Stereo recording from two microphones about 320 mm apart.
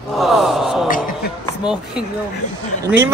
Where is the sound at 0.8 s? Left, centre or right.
Left.